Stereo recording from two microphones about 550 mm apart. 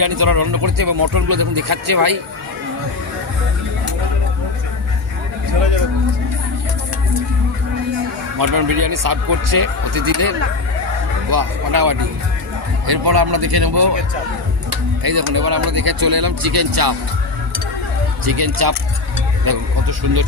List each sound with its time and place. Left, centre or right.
0.0 s speech: right
8.4 s speech: right
15.0 s speech: right
18.3 s speech: right